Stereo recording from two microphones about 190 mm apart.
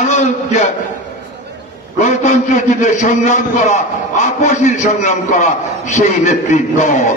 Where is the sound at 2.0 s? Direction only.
40° left (ahead or behind).